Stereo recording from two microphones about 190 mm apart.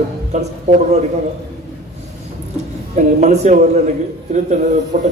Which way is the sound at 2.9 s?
35° right (ahead or behind).